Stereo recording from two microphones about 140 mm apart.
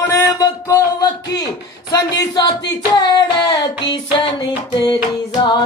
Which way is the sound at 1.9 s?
25° left (ahead or behind).